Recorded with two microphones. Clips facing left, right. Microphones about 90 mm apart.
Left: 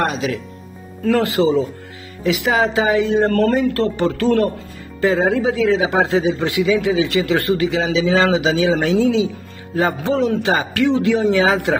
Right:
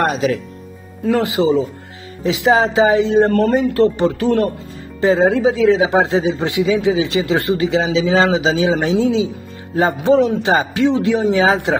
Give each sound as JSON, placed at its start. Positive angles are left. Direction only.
{"t": 0.0, "sound": "speech", "side_deg": -40}
{"t": 1.0, "sound": "a man's voice", "side_deg": -20}